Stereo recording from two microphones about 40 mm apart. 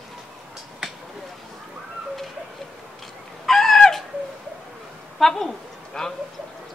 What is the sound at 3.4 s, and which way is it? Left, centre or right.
Chicken, centre.